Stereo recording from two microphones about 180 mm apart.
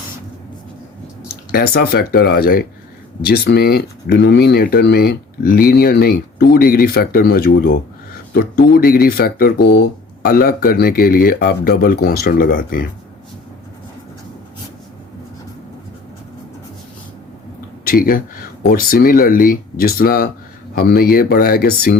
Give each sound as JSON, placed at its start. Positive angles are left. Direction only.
{"t": 1.5, "sound": "speech", "side_deg": 60}
{"t": 17.8, "sound": "speech", "side_deg": 55}